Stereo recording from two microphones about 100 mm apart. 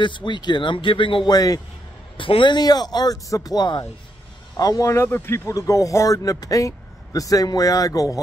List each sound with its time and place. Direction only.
0.0 s speech: 50° left (ahead or behind)
2.1 s speech: 60° left (ahead or behind); by 8.2 s 35° left (ahead or behind)